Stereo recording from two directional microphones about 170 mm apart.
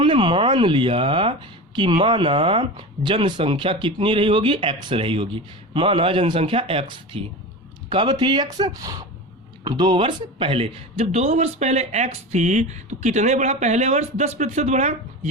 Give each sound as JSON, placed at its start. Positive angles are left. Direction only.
{"t": 0.0, "sound": "speech", "side_deg": -30}